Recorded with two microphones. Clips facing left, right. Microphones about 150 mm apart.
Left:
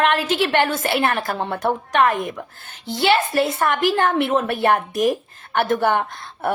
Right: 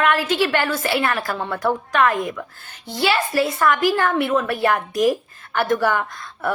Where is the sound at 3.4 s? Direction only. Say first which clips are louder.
Right 1 dB; 25° left (ahead or behind).